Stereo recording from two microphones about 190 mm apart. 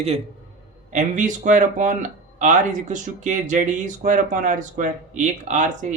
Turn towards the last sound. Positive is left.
turn(degrees=-40)  # may be behind; listen again after turning